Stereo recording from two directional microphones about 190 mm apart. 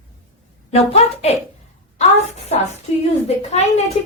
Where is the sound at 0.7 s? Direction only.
35° left (ahead or behind).